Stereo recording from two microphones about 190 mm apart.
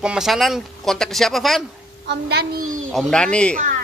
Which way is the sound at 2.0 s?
60° right (ahead or behind).